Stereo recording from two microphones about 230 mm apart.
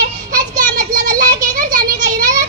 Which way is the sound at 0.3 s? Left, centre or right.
Right.